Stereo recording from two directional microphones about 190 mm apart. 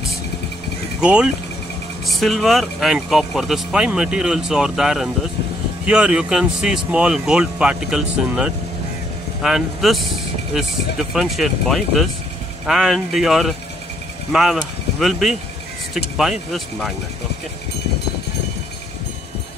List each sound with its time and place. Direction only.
1.0 s speech: 5° right (ahead or behind)